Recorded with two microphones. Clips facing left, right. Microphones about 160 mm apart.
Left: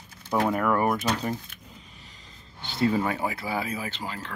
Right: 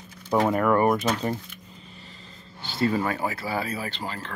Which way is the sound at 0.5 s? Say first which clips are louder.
Right 3 dB; centre (ahead or behind).